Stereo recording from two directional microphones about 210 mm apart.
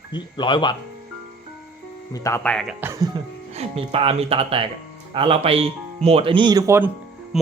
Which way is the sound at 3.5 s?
30° right (ahead or behind).